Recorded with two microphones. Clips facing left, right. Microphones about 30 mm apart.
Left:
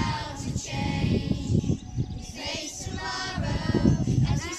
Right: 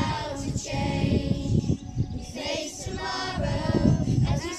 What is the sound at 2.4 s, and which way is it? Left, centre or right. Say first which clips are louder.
Choir: right 3 dB; centre.